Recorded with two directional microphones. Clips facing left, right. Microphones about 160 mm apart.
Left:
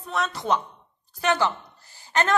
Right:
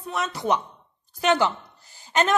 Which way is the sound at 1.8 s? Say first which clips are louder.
Right 2 dB; 15° right (ahead or behind).